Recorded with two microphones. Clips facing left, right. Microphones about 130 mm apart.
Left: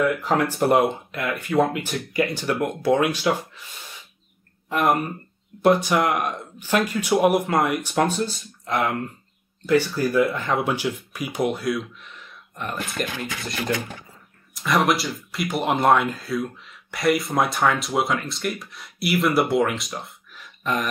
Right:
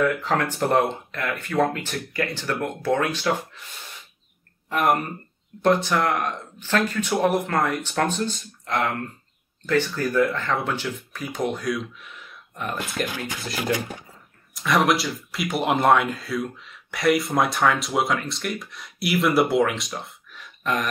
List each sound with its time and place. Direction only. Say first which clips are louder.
0.0 s speech: left 1 dB; 10° left (ahead or behind)
4.6 s speech: left 1 dB; 5° left (ahead or behind)
14.5 s speech: even; centre (ahead or behind)